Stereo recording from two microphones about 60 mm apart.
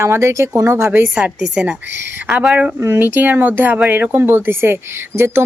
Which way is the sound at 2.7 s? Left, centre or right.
Right.